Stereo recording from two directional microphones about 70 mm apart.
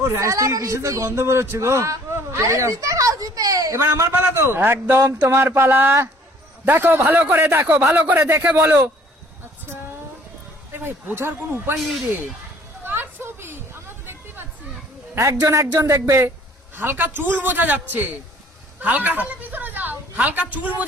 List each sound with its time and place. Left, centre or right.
0.0 s a man's voice: right
3.8 s a man's voice: right
10.7 s a man's voice: right
11.8 s speech: centre
12.8 s a sound: right
15.4 s a man's voice: right
16.7 s a man's voice: right
18.8 s a sound: right
20.1 s a man's voice: centre